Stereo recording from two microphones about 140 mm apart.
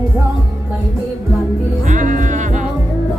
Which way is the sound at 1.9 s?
65° right (ahead or behind).